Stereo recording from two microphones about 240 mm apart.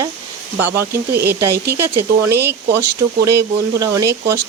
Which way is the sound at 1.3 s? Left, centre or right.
Centre.